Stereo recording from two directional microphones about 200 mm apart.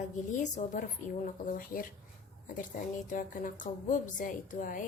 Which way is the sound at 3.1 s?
40° left (ahead or behind).